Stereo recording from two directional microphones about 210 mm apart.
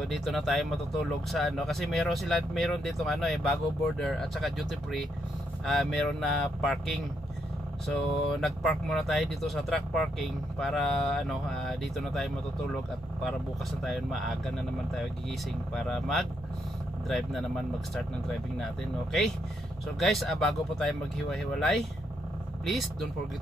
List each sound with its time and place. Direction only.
0.0 s speech: centre (ahead or behind)
13.8 s speech: centre (ahead or behind)
15.7 s speech: centre (ahead or behind)
20.0 s speech: centre (ahead or behind)